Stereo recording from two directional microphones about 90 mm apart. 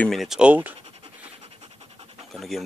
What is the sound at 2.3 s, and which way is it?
Speech, centre (ahead or behind).